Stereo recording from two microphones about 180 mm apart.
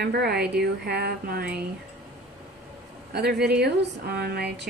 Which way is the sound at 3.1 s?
65° right (ahead or behind).